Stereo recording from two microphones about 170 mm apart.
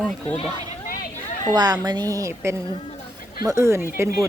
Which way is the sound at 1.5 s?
25° right (ahead or behind).